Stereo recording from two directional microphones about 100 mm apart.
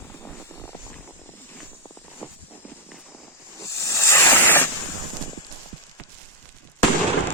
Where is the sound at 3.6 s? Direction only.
30° left (ahead or behind).